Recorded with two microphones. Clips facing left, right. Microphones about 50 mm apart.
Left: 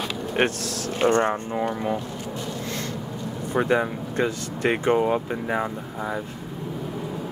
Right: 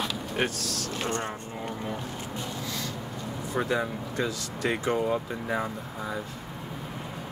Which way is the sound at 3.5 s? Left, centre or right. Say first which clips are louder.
Left 6 dB; left.